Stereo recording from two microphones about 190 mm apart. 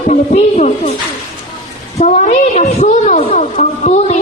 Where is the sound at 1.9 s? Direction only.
40° left (ahead or behind).